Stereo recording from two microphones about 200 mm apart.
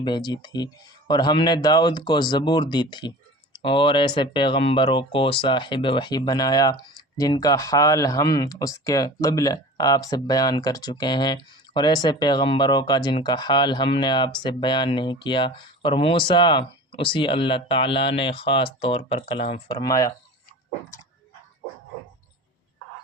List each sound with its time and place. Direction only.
0.0 s speech: 20° left (ahead or behind)
19.7 s speech: 15° left (ahead or behind)